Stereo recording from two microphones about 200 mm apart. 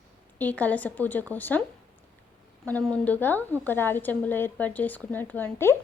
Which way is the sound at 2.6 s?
5° left (ahead or behind).